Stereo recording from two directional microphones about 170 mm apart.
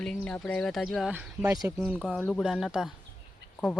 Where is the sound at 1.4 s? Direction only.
20° right (ahead or behind).